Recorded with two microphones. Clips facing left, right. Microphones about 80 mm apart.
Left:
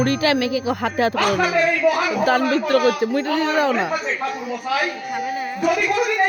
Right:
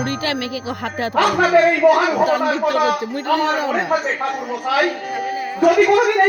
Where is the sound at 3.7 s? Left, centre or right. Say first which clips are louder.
Right 3 dB; right.